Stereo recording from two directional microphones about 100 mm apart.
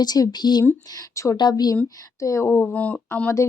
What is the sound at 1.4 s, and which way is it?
Speech, 45° left (ahead or behind).